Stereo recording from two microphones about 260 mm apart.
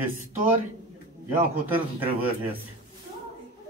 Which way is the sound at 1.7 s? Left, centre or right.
Centre.